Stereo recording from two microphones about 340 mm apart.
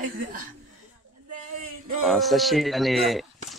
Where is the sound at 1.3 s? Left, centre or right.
Right.